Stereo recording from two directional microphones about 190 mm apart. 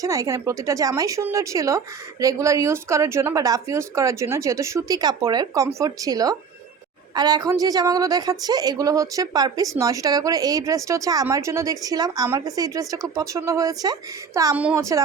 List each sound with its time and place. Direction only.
0.0 s a woman's voice: 15° right (ahead or behind)